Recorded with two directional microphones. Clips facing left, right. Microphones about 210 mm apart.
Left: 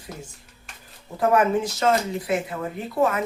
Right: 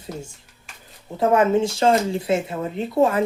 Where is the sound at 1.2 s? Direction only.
25° right (ahead or behind).